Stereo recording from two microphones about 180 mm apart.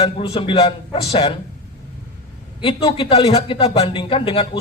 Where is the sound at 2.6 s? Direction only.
30° left (ahead or behind).